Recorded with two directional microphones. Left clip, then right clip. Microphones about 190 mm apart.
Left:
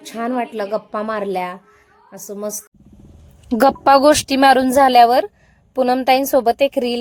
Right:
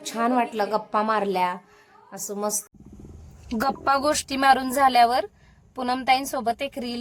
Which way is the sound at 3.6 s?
40° left (ahead or behind).